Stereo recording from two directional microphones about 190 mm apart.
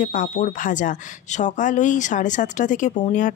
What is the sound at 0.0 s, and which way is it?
Speech, 40° left (ahead or behind).